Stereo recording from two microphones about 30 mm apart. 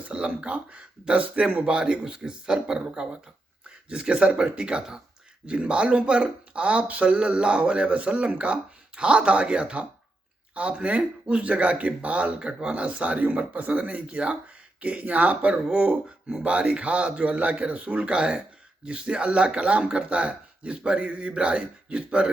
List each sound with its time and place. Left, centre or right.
0.1 s speech: right
1.6 s speech: right
7.2 s speech: right
9.0 s speech: right
12.4 s speech: right
12.9 s speech: right
14.1 s speech: right
14.8 s speech: right
16.4 s speech: right
18.0 s speech: right
21.0 s speech: right